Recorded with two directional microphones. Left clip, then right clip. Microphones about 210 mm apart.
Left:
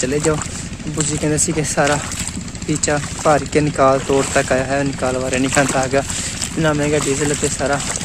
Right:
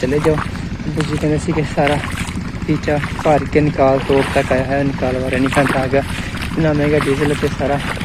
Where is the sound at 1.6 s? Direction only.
30° left (ahead or behind).